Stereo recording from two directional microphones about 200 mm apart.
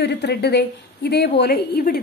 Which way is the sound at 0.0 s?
60° left (ahead or behind).